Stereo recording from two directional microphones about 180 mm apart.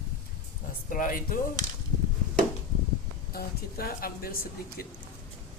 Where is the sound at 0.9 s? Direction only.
50° left (ahead or behind).